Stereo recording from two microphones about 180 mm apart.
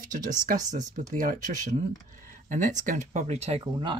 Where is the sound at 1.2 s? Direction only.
50° right (ahead or behind).